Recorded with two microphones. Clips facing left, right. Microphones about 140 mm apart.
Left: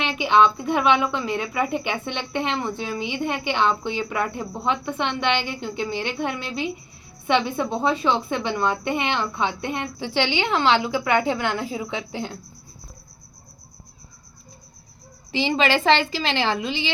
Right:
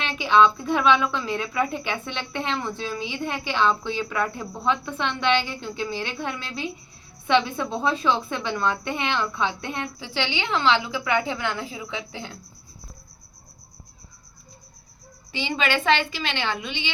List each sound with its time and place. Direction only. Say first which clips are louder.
0.0 s a woman's voice: left 1 dB; 15° left (ahead or behind)
10.2 s a woman's voice: left 4 dB; 60° left (ahead or behind)
15.3 s a woman's voice: left 5 dB; 30° left (ahead or behind)